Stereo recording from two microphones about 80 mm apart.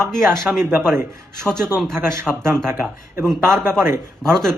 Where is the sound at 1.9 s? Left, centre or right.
Right.